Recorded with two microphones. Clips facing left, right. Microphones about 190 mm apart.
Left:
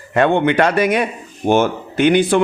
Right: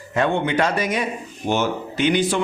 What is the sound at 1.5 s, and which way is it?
Speech, 55° left (ahead or behind).